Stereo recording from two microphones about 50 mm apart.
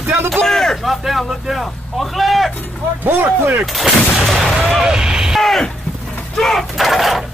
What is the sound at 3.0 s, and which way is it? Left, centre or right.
Speech, right.